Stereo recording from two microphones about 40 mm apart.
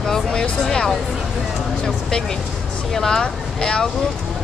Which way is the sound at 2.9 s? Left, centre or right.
Centre.